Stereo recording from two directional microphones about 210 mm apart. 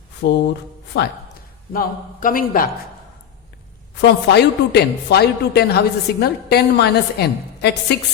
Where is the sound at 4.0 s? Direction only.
55° left (ahead or behind).